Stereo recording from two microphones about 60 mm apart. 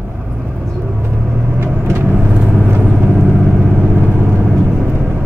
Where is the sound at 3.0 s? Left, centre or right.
Right.